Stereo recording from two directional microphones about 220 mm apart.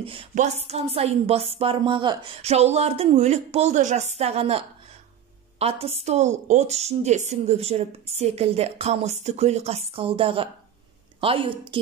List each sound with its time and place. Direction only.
0.0 s a woman's voice: 25° right (ahead or behind)